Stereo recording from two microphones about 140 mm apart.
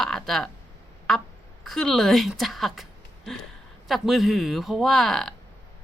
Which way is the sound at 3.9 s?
Centre (ahead or behind).